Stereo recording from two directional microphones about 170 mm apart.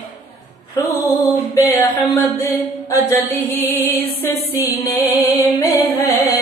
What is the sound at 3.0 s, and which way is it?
Mantra, 10° left (ahead or behind).